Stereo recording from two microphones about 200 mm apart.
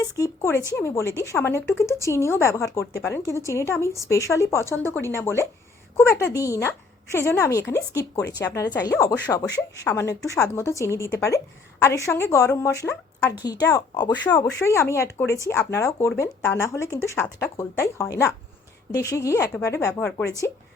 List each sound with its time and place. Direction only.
0.0 s a woman's voice: 15° left (ahead or behind)